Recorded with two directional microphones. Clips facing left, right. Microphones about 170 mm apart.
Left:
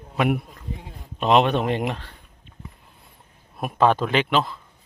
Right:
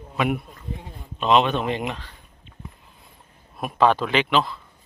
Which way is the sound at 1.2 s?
55° left (ahead or behind).